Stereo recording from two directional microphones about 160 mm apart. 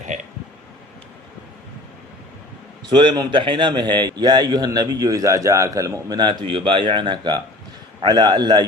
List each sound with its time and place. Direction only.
2.9 s a man's voice: 30° right (ahead or behind)